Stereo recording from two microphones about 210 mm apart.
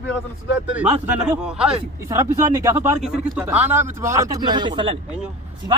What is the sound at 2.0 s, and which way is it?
Speech, 15° right (ahead or behind).